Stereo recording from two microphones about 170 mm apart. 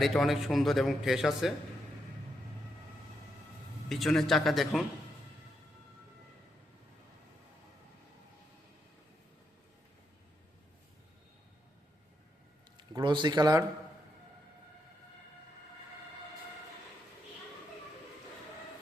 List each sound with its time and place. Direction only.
0.0 s a man's voice: centre (ahead or behind)
3.8 s a man's voice: centre (ahead or behind)
12.7 s a man's voice: 25° right (ahead or behind)